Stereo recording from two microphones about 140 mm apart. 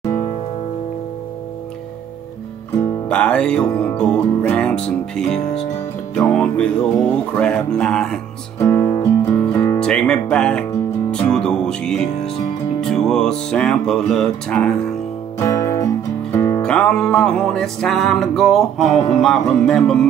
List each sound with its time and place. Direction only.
2.8 s music: 10° left (ahead or behind)
8.5 s music: 20° left (ahead or behind)
9.4 s music: 10° left (ahead or behind)
9.8 s speech: 5° left (ahead or behind)
11.1 s music: 5° left (ahead or behind)
15.3 s music: 20° left (ahead or behind)
16.6 s music: 5° left (ahead or behind)